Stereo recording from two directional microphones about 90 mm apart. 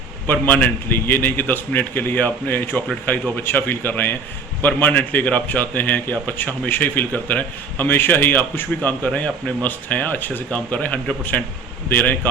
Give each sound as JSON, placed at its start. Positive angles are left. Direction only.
{"t": 0.3, "sound": "a man's voice", "side_deg": 20}